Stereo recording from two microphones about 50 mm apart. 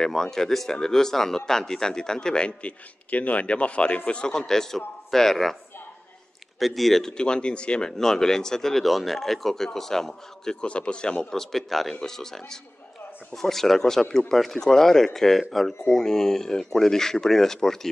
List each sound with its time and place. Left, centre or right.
0.0 s speech: centre
6.6 s speech: centre
7.1 s speech: centre